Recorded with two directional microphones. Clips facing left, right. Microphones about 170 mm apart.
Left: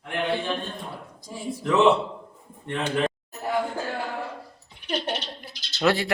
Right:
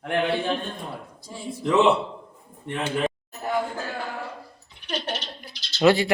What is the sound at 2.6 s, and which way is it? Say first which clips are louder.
Speech: even; 5° right (ahead or behind).